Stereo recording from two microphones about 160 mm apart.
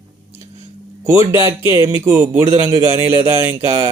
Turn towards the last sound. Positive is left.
turn(degrees=-15)  # may be behind; listen again after turning